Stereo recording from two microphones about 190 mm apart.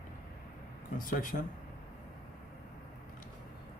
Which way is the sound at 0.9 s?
45° left (ahead or behind).